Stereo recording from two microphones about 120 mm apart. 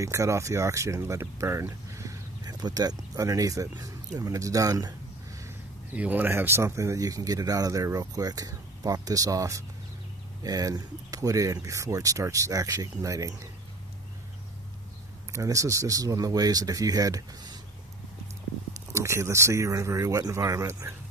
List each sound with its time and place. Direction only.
0.0 s speech: 25° right (ahead or behind)
5.9 s speech: 15° right (ahead or behind)
15.3 s speech: 25° right (ahead or behind)
18.9 s speech: 25° right (ahead or behind)